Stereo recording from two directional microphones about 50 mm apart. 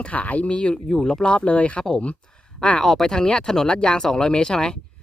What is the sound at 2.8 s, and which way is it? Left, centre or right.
Speech, centre.